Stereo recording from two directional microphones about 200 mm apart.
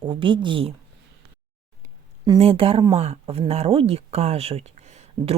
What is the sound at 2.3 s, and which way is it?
A woman's voice, 30° right (ahead or behind).